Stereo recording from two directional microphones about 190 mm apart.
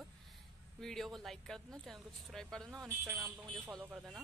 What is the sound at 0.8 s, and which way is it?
Speech, centre (ahead or behind).